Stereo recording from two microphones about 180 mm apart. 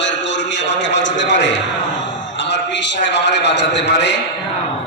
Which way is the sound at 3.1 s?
75° left (ahead or behind).